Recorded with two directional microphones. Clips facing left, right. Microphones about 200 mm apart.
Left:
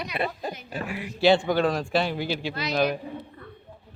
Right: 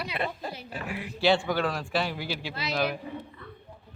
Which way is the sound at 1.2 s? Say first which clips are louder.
Left 4 dB; 20° left (ahead or behind).